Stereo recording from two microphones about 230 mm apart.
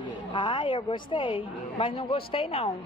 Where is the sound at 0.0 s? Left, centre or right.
Left.